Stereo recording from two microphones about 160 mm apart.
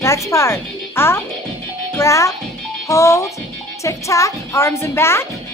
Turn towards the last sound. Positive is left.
turn(degrees=15)  # may be behind; listen again after turning